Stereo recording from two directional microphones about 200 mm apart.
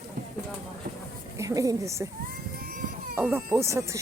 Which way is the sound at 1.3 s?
15° right (ahead or behind).